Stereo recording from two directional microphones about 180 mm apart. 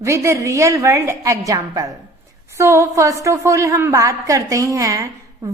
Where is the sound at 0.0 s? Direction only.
15° right (ahead or behind).